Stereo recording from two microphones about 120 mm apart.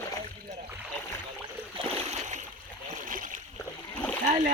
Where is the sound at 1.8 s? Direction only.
50° right (ahead or behind).